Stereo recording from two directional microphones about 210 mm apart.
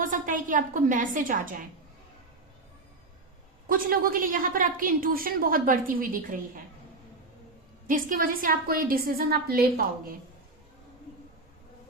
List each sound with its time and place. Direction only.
0.0 s a woman's voice: 40° right (ahead or behind)
3.7 s a woman's voice: 45° right (ahead or behind)
7.9 s a woman's voice: 40° right (ahead or behind)